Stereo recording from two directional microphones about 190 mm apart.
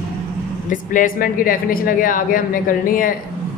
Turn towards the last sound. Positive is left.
turn(degrees=45)  # may be behind; listen again after turning